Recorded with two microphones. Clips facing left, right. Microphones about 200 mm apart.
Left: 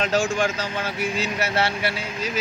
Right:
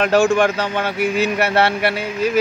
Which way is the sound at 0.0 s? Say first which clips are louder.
Right 7 dB; 65° right (ahead or behind).